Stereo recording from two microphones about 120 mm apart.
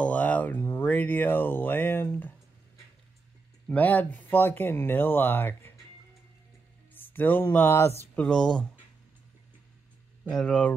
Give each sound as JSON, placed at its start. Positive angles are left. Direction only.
{"t": 0.0, "sound": "speech", "side_deg": 10}
{"t": 3.6, "sound": "speech", "side_deg": 15}
{"t": 6.9, "sound": "music", "side_deg": 15}
{"t": 8.2, "sound": "speech", "side_deg": 5}
{"t": 10.2, "sound": "speech", "side_deg": 10}